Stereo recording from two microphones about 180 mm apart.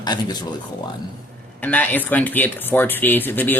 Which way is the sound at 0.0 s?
25° left (ahead or behind).